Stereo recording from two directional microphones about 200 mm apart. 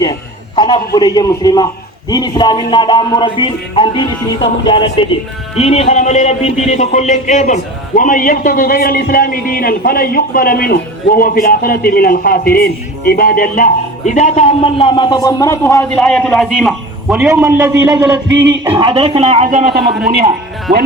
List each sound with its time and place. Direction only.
0.0 s a sound: 20° left (ahead or behind)
0.9 s music: 20° left (ahead or behind)
5.5 s speech: 30° left (ahead or behind); by 18.9 s 15° right (ahead or behind)
18.9 s speech: 30° right (ahead or behind)
19.5 s speech: 40° right (ahead or behind)